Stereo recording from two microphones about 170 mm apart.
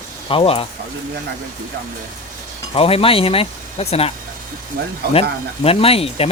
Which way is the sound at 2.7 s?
35° left (ahead or behind).